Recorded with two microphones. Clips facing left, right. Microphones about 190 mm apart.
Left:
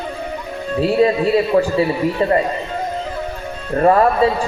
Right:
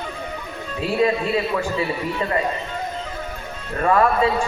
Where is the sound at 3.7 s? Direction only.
35° left (ahead or behind).